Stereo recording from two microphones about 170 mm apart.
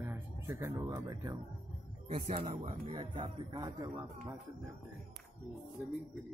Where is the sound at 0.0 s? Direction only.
15° right (ahead or behind).